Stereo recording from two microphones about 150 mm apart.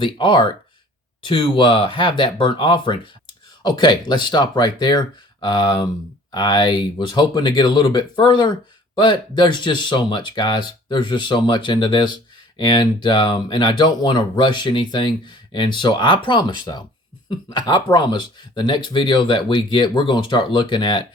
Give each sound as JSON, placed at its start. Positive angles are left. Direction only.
{"t": 0.0, "sound": "speech", "side_deg": 35}